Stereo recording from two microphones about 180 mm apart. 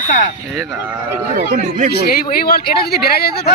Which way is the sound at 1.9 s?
60° left (ahead or behind).